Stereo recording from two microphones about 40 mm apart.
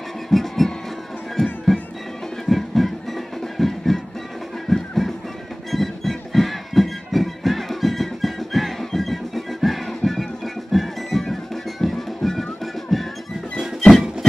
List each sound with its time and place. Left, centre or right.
0.3 s music: centre